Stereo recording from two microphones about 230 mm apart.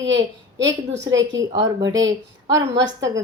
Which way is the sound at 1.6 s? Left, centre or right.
Centre.